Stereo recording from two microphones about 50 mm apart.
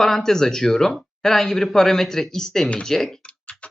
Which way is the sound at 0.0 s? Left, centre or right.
Centre.